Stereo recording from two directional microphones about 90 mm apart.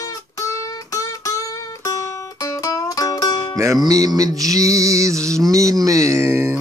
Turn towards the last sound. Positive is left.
turn(degrees=-30)  # may be behind; listen again after turning